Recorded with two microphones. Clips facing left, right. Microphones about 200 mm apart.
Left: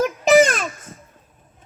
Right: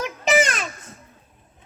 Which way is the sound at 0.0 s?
45° left (ahead or behind).